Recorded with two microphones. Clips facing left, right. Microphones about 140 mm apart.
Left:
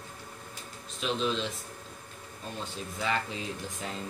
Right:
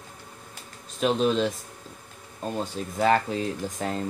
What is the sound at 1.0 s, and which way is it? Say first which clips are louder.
Speech: right 8 dB; 50° right (ahead or behind).